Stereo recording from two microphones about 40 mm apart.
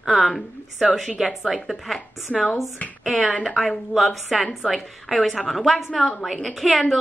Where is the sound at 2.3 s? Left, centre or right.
Left.